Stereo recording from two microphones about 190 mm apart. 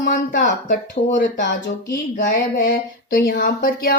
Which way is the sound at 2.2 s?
50° left (ahead or behind).